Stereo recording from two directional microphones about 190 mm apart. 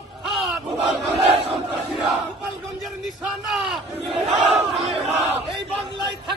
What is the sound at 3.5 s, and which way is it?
Battle cry, centre (ahead or behind).